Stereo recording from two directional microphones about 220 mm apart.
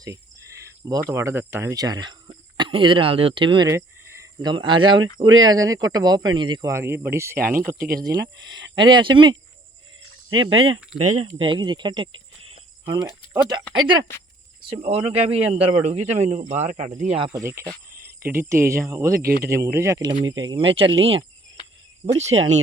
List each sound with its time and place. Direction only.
0.6 s cricket: 15° right (ahead or behind)
1.1 s speech: 10° right (ahead or behind)
5.2 s speech: 65° right (ahead or behind)
5.5 s speech: 15° right (ahead or behind)
7.8 s speech: 45° right (ahead or behind)
8.8 s speech: 20° right (ahead or behind)
10.2 s speech: 65° right (ahead or behind)
10.9 s speech: 35° right (ahead or behind)
11.3 s speech: 20° right (ahead or behind)
15.4 s speech: 5° right (ahead or behind)
15.8 s speech: 30° right (ahead or behind)
17.4 s speech: 10° right (ahead or behind); by 22.4 s 30° right (ahead or behind)